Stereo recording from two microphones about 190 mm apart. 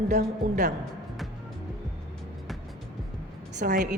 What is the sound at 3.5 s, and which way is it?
Speech, 45° right (ahead or behind).